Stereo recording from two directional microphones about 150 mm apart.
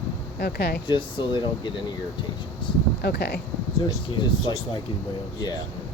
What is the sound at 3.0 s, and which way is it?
Speech, 90° left.